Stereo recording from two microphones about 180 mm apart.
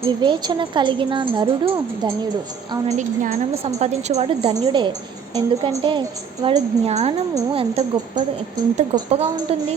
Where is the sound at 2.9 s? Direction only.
40° right (ahead or behind); by 6.6 s 25° right (ahead or behind).